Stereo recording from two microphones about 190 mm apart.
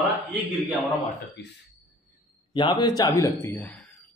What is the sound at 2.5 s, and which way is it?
A man's voice, 25° left (ahead or behind).